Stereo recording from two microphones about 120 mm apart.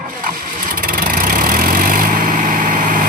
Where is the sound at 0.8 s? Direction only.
90° right.